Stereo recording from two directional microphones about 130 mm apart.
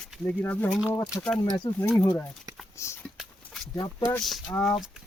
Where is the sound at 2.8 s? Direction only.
20° left (ahead or behind).